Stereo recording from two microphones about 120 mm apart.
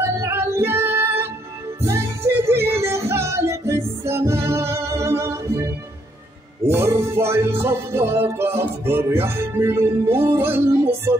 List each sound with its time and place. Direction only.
0.0 s music: 20° right (ahead or behind)
6.7 s music: 20° right (ahead or behind)